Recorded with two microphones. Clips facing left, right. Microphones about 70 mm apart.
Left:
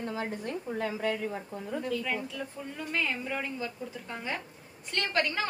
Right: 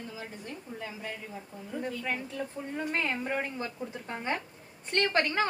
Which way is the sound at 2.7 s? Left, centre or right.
Right.